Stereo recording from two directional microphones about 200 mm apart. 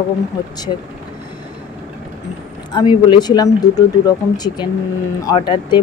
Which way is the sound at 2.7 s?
20° left (ahead or behind).